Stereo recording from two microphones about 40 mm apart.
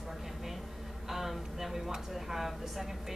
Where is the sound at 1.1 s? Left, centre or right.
Centre.